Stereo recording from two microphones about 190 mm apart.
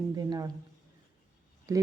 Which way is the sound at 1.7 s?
15° right (ahead or behind).